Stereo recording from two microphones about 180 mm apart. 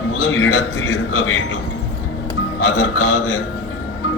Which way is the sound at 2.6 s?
90° left.